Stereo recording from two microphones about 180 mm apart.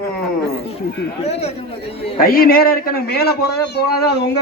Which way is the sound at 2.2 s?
55° left (ahead or behind).